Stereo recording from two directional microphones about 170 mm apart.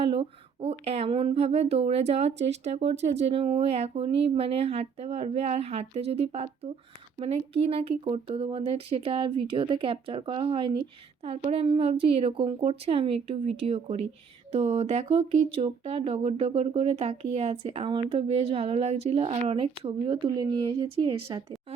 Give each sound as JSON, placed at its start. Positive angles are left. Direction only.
{"t": 0.0, "sound": "a woman's voice", "side_deg": -35}